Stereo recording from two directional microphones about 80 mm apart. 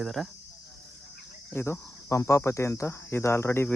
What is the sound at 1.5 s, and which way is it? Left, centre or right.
Cricket, left.